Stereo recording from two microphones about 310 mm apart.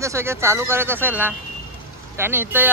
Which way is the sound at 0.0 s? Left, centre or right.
Centre.